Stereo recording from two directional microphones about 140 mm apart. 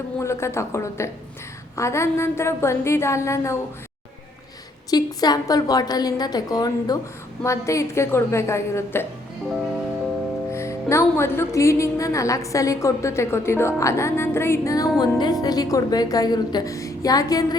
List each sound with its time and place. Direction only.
0.2 s a woman's voice: 20° left (ahead or behind)
4.9 s a woman's voice: 30° left (ahead or behind)
10.5 s a woman's voice: 20° left (ahead or behind)